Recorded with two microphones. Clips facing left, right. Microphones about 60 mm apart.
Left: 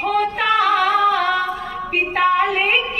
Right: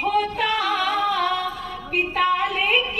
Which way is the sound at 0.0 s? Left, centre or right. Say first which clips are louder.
Left 3 dB; left.